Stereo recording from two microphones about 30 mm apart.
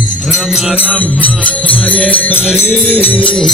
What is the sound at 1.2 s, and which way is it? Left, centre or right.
Music, left.